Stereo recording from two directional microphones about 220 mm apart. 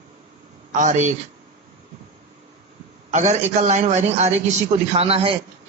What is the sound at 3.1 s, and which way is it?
A man's voice, 30° right (ahead or behind).